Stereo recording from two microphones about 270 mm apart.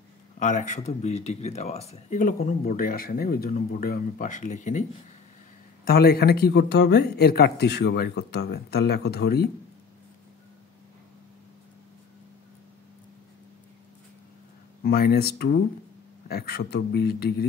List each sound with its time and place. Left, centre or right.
0.4 s speech: left
5.9 s speech: left
14.8 s speech: left